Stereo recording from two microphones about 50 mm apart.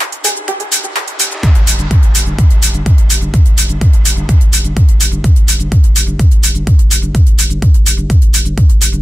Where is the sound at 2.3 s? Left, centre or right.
Centre.